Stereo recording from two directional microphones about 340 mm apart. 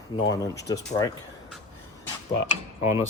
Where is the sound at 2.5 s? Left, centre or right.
Centre.